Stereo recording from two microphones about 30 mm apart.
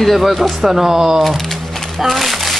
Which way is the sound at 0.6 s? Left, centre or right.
Centre.